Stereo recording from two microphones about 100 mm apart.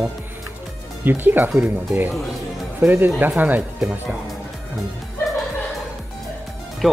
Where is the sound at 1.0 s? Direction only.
20° right (ahead or behind).